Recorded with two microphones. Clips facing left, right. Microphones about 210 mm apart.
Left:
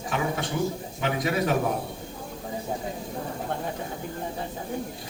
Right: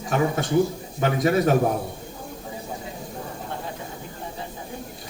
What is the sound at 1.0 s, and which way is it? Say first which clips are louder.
Speech: right 5 dB; 40° right (ahead or behind).